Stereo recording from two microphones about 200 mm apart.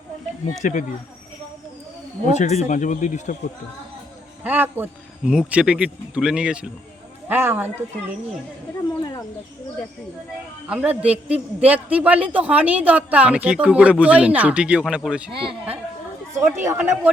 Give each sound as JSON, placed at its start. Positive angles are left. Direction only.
{"t": 0.6, "sound": "speech", "side_deg": 40}
{"t": 2.2, "sound": "speech", "side_deg": 35}
{"t": 4.4, "sound": "a man's voice", "side_deg": -10}
{"t": 10.7, "sound": "a man's voice", "side_deg": -5}
{"t": 15.3, "sound": "speech", "side_deg": -25}
{"t": 16.6, "sound": "a man's voice", "side_deg": -10}